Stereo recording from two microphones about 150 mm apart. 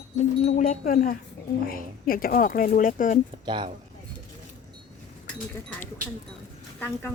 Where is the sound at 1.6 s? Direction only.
75° left (ahead or behind).